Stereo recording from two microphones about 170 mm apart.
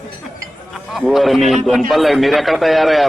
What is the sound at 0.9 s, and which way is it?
A man's voice, centre (ahead or behind).